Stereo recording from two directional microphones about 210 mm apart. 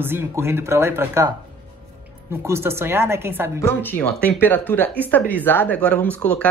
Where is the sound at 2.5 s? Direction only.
10° right (ahead or behind).